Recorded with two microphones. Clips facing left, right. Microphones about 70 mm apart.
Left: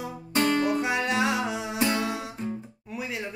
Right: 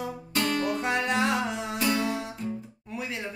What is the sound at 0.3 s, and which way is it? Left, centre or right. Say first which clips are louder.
Music: left 4 dB; left.